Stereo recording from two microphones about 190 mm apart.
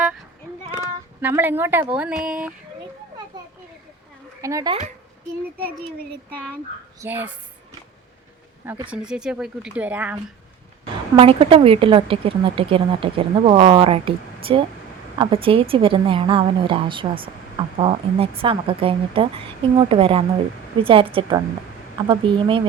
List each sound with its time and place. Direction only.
0.7 s speech: 10° right (ahead or behind)
4.4 s speech: 15° right (ahead or behind)
6.3 s speech: 5° left (ahead or behind)
7.0 s speech: 10° right (ahead or behind)
8.9 s speech: 5° right (ahead or behind)
11.2 s a woman's voice: 30° right (ahead or behind)